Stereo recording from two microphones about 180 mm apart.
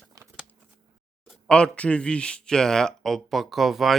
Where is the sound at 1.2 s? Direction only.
Centre (ahead or behind).